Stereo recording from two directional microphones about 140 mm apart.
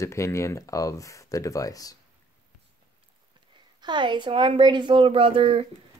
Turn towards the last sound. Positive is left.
turn(degrees=-45)  # may be behind; listen again after turning